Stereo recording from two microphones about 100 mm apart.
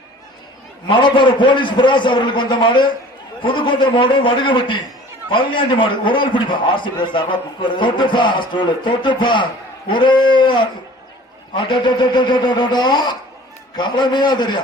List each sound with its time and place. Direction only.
0.9 s a man's voice: 55° left (ahead or behind)